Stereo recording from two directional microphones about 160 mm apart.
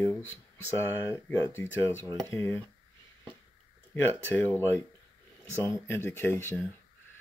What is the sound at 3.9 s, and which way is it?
Speech, 10° left (ahead or behind).